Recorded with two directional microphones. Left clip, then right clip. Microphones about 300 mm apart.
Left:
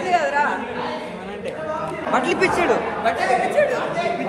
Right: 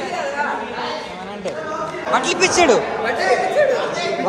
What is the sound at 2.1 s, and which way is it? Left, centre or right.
Speech, centre.